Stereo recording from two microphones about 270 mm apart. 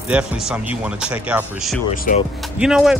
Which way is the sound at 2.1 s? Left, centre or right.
Left.